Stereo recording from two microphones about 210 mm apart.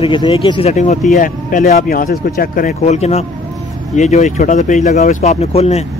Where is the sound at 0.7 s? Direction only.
35° left (ahead or behind).